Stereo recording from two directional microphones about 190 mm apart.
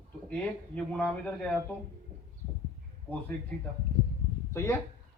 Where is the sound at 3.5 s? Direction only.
5° left (ahead or behind).